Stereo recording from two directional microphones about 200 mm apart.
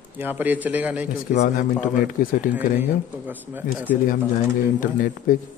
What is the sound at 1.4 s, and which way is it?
Speech, 45° left (ahead or behind).